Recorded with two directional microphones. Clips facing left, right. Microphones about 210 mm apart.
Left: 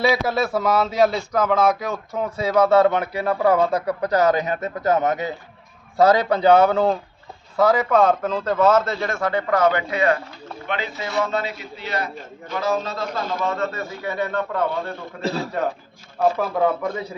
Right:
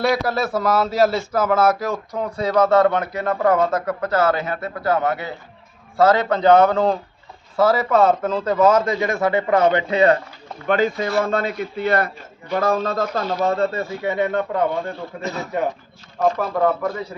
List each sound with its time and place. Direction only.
0.0 s a man's voice: centre (ahead or behind); by 10.2 s 30° right (ahead or behind)
10.7 s a man's voice: 45° right (ahead or behind)
13.4 s speech: 35° right (ahead or behind)
15.2 s a man's voice: 30° left (ahead or behind)
16.2 s speech: 5° left (ahead or behind)